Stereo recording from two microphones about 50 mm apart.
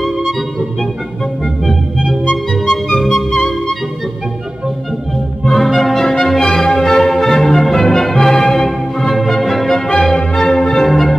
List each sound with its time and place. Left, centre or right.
2.5 s music: centre
5.5 s music: centre